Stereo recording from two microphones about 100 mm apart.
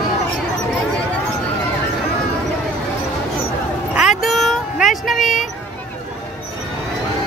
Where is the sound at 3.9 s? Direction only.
5° right (ahead or behind).